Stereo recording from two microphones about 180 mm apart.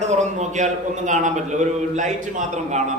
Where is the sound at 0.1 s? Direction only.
40° right (ahead or behind).